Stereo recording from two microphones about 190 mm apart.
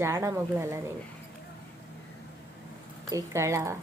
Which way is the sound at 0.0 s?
15° right (ahead or behind).